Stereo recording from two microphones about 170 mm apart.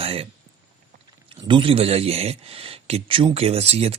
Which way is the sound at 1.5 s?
30° right (ahead or behind).